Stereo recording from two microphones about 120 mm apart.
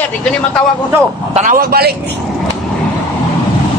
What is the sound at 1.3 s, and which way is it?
Speech, 80° right.